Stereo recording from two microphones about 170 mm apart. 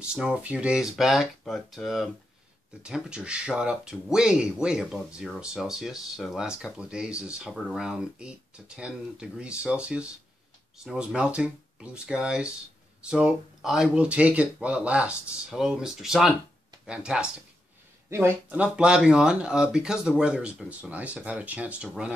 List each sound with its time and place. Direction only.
0.0 s speech: 5° right (ahead or behind)